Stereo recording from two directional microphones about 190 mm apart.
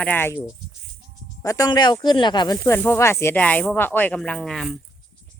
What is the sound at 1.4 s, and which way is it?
Speech, 20° left (ahead or behind).